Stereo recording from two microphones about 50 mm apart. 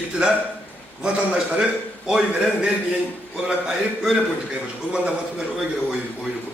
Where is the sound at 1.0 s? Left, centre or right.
Centre.